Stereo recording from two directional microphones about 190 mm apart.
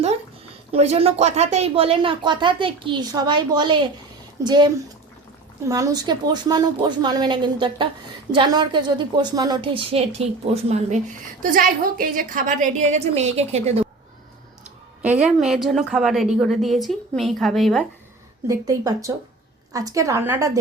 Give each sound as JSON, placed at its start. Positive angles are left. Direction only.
{"t": 0.7, "sound": "speech", "side_deg": -30}
{"t": 11.4, "sound": "a woman's voice", "side_deg": -45}
{"t": 15.0, "sound": "a woman's voice", "side_deg": -5}
{"t": 18.4, "sound": "a woman's voice", "side_deg": -20}